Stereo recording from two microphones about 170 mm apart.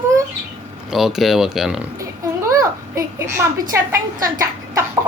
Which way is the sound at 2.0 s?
20° right (ahead or behind).